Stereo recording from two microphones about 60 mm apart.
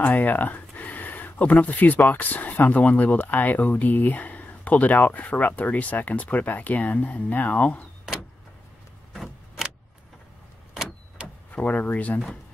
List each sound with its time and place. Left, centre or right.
0.0 s speech: left
9.1 s a sound: centre
10.7 s vehicle: centre
11.5 s speech: left